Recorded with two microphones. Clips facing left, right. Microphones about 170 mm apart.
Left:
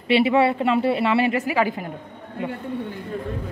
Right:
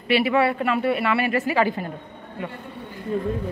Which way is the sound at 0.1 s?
25° left (ahead or behind).